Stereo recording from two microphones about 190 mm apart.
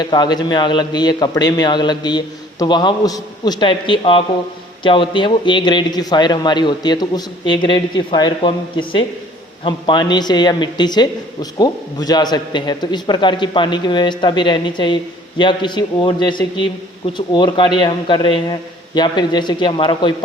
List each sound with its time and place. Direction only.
0.0 s a man's voice: 20° left (ahead or behind)